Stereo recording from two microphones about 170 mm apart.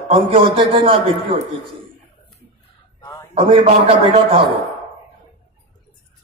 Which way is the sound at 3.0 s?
25° left (ahead or behind).